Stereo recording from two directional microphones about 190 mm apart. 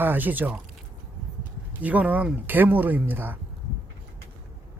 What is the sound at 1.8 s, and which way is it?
Speech, 10° right (ahead or behind).